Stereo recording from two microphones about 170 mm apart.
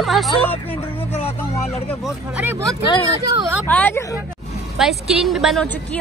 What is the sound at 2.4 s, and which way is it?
Speech, 10° right (ahead or behind).